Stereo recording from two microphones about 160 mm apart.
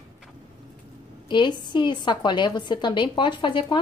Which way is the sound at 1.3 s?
30° left (ahead or behind).